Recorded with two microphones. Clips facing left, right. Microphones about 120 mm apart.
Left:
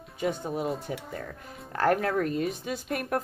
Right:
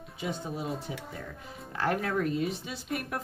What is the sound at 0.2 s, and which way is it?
Speech, 45° left (ahead or behind).